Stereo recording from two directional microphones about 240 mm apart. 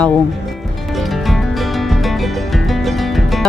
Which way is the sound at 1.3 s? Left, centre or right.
Centre.